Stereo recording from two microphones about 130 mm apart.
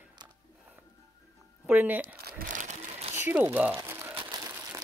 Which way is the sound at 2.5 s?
75° right (ahead or behind).